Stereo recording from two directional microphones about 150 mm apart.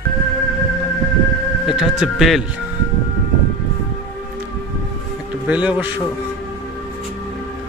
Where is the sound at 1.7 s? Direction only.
5° right (ahead or behind).